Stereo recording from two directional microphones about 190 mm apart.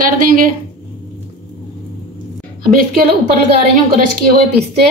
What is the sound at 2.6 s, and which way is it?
A woman's voice, 50° right (ahead or behind).